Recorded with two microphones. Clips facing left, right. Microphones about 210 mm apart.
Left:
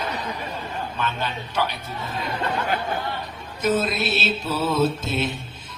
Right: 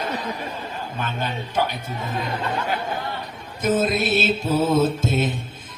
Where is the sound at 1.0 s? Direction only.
50° right (ahead or behind).